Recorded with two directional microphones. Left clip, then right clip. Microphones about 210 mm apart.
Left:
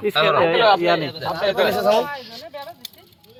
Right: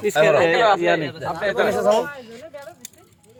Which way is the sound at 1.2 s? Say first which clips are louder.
Left 2 dB; 15° right (ahead or behind).